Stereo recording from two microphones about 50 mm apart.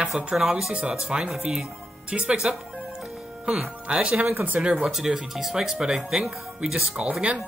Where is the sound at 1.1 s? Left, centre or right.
Centre.